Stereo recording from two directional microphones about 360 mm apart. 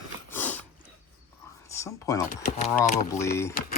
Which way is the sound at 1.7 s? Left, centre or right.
Centre.